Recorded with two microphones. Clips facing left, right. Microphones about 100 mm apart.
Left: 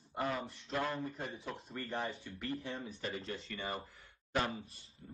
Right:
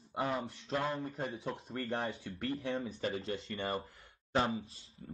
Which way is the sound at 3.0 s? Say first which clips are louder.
Right 5 dB; 35° right (ahead or behind).